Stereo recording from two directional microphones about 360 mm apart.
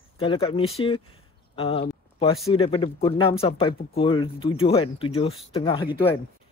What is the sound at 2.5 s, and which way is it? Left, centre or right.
A man's voice, centre.